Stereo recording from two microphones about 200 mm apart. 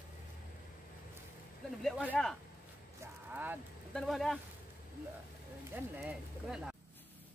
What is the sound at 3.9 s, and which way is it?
Speech, centre (ahead or behind).